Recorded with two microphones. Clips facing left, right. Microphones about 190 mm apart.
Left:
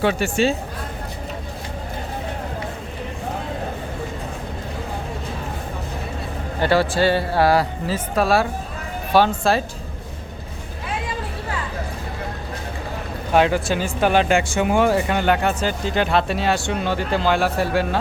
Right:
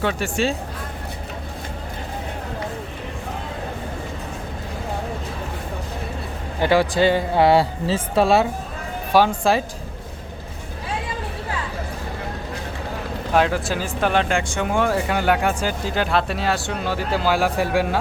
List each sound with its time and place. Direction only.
0.0 s speech: 5° left (ahead or behind)
6.6 s speech: 15° right (ahead or behind)
9.1 s speech: 10° right (ahead or behind)
13.3 s speech: centre (ahead or behind)